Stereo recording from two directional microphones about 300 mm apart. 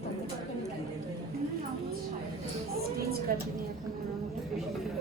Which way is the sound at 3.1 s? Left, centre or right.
Right.